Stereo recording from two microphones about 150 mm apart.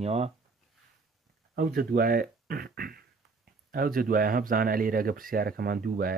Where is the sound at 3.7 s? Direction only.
70° right (ahead or behind).